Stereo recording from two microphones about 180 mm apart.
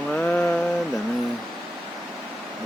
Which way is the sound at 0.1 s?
5° left (ahead or behind).